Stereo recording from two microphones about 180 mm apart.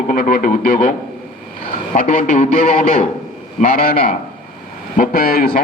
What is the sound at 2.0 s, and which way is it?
A man's voice, 50° left (ahead or behind).